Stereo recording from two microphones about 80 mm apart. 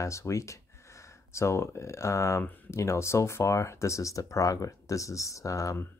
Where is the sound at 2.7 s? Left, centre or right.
Left.